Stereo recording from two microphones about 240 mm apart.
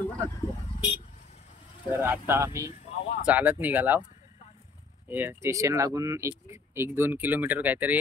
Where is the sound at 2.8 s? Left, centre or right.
Left.